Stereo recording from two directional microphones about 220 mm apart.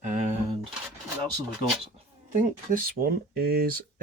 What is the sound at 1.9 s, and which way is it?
Speech, 35° right (ahead or behind).